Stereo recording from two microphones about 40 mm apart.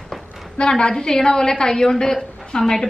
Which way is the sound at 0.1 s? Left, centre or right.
Centre.